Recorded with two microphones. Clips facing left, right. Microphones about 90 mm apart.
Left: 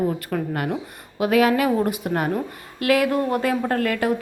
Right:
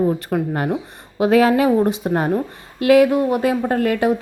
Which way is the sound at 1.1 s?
30° right (ahead or behind).